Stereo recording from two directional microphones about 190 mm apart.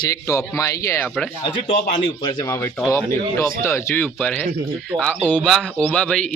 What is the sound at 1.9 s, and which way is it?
Speech, 20° left (ahead or behind).